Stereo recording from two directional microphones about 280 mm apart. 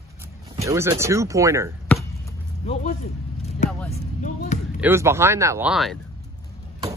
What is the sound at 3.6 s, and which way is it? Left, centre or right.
Vehicle, left.